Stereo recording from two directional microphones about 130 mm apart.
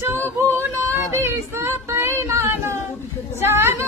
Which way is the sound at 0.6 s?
20° right (ahead or behind).